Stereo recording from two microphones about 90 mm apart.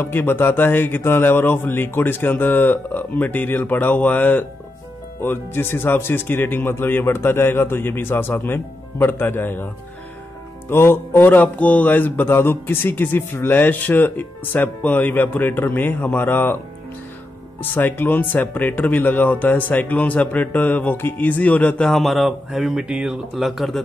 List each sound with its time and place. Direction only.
0.0 s mantra: 25° left (ahead or behind)
10.7 s mantra: 25° left (ahead or behind)
17.6 s speech: 25° left (ahead or behind); by 23.8 s centre (ahead or behind)